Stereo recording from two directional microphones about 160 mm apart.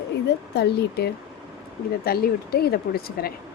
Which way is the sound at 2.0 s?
75° left (ahead or behind).